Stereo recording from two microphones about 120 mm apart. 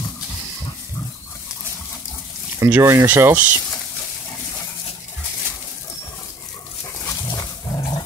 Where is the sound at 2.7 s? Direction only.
20° right (ahead or behind).